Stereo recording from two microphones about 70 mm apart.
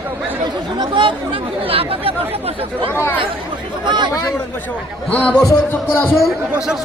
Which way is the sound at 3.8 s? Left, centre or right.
Right.